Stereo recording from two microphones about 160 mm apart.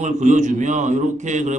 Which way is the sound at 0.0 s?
50° right (ahead or behind).